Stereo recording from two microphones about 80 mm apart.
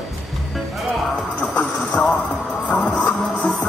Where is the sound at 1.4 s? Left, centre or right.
Centre.